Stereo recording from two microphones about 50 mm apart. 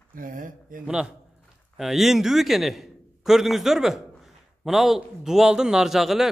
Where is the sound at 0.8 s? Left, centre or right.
Centre.